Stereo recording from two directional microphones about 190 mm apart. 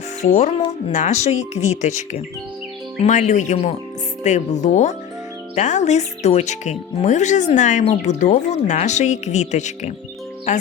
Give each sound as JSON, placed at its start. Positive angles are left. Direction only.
{"t": 0.2, "sound": "speech", "side_deg": 40}